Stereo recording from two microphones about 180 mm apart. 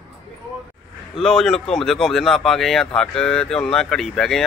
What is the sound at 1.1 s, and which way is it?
Speech, centre (ahead or behind).